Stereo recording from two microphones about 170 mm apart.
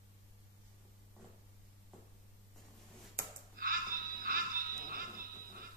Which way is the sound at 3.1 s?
60° right (ahead or behind).